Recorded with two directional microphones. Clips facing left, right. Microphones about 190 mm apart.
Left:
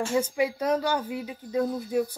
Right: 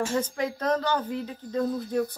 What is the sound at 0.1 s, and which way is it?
Speech, 10° left (ahead or behind).